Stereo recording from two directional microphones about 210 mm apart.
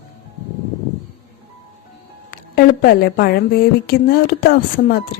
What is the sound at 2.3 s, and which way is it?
A woman's voice, 45° left (ahead or behind).